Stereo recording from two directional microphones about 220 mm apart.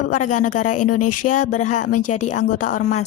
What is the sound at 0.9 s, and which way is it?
Speech, 90° left.